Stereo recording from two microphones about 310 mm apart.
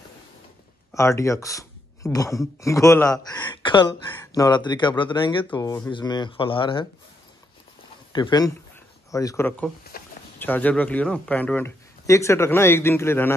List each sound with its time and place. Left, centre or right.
0.9 s speech: centre
8.1 s speech: centre
9.9 s a sound: left
10.4 s speech: centre